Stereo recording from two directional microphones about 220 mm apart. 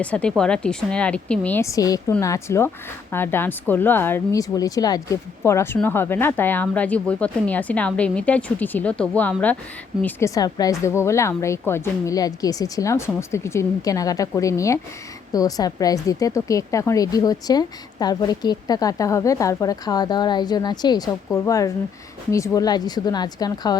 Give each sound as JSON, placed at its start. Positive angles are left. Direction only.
{"t": 0.0, "sound": "a woman's voice", "side_deg": 5}